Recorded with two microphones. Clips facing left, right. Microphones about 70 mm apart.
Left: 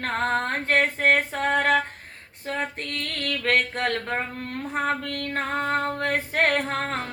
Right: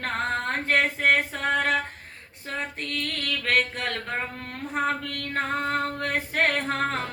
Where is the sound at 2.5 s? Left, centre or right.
Left.